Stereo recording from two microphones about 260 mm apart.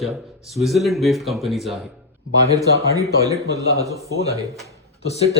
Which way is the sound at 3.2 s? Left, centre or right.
Centre.